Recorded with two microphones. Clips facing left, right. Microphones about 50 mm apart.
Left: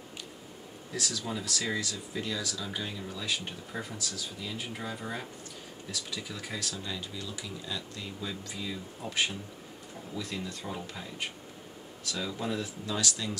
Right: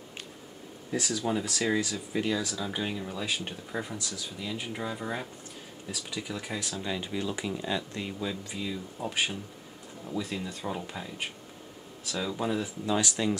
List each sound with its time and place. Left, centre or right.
0.9 s speech: right
6.8 s speech: right
8.2 s speech: centre